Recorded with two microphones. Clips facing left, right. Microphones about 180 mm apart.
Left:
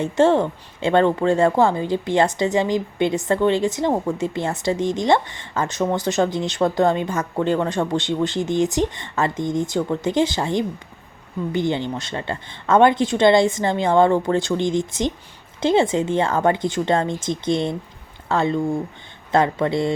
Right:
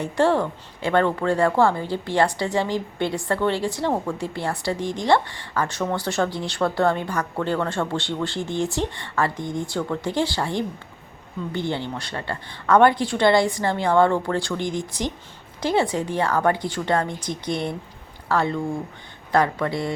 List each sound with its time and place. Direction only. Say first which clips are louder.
0.0 s a woman's voice: left 4 dB; 25° left (ahead or behind)